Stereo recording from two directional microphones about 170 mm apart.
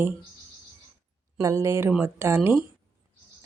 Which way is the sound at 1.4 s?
15° right (ahead or behind).